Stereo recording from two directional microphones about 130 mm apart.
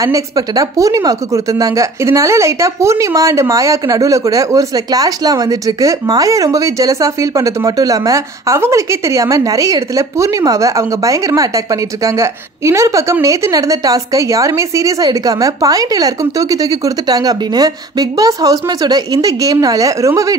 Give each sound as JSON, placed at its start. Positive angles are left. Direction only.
{"t": 0.0, "sound": "speech", "side_deg": -25}